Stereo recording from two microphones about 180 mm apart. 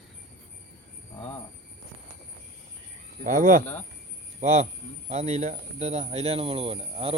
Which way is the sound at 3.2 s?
45° right (ahead or behind).